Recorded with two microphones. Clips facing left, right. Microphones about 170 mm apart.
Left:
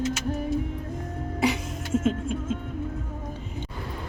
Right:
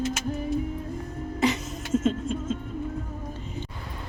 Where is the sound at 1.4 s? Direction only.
10° left (ahead or behind).